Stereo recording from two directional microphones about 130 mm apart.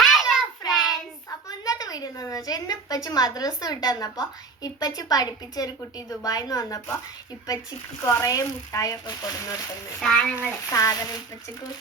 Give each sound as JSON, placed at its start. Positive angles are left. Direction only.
{"t": 0.0, "sound": "child singing", "side_deg": 0}
{"t": 1.5, "sound": "a woman's voice", "side_deg": 30}
{"t": 8.0, "sound": "a woman's voice", "side_deg": 25}
{"t": 10.0, "sound": "a child's voice", "side_deg": 5}
{"t": 10.7, "sound": "a woman's voice", "side_deg": 25}